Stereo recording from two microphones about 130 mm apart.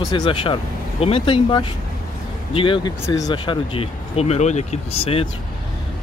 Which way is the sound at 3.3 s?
40° left (ahead or behind).